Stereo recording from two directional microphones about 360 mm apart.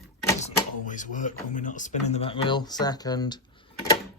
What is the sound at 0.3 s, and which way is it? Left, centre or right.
Speech, centre.